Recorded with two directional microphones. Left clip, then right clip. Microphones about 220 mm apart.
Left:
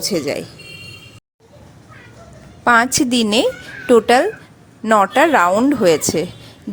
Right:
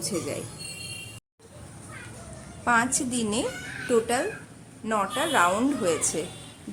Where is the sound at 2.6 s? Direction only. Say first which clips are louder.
Left 11 dB; 35° left (ahead or behind).